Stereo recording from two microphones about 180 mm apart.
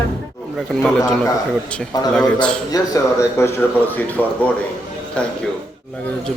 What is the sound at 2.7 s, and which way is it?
Speech, 15° left (ahead or behind).